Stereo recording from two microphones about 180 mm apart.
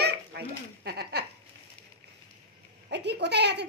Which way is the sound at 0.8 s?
65° right (ahead or behind).